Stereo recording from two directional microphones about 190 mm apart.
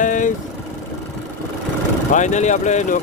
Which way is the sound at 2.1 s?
40° left (ahead or behind).